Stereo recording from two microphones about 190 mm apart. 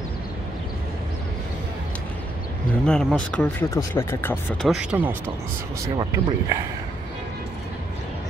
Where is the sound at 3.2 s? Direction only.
5° left (ahead or behind).